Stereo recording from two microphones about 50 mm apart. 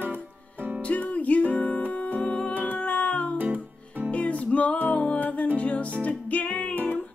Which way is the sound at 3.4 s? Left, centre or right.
Right.